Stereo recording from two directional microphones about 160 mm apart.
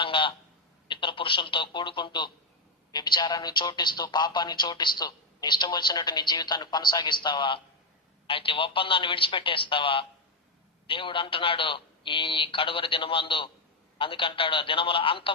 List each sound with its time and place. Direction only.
0.0 s telephone: 30° left (ahead or behind)
0.9 s a man's voice: 30° left (ahead or behind)